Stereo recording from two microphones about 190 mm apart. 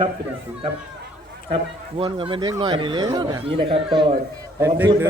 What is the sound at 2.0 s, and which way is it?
A man's voice, 30° right (ahead or behind).